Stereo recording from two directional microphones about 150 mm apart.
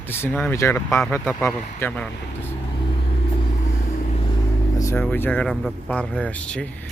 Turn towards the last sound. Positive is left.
turn(degrees=5)  # may be behind; listen again after turning